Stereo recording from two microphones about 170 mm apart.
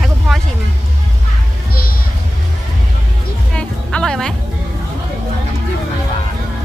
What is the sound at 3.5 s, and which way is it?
Music, 5° left (ahead or behind).